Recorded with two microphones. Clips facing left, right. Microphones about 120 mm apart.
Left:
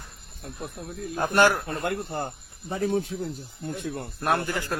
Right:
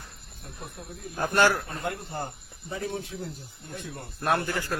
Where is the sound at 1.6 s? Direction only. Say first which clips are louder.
Left 4 dB; 65° left (ahead or behind).